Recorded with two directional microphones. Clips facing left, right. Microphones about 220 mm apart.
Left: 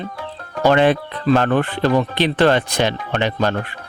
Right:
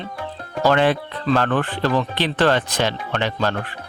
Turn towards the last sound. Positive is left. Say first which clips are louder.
# left 3 dB
turn(degrees=15)  # may be behind; listen again after turning